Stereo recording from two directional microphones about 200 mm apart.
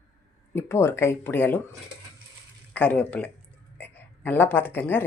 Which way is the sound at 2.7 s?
10° left (ahead or behind).